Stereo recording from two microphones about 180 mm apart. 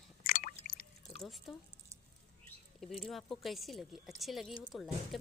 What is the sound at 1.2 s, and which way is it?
Speech, centre (ahead or behind).